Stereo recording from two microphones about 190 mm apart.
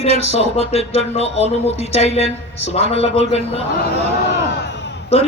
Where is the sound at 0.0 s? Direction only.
30° left (ahead or behind).